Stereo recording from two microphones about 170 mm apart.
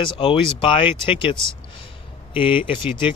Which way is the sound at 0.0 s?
30° left (ahead or behind).